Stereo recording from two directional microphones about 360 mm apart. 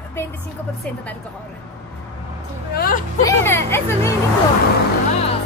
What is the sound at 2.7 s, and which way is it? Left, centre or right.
Speech, left.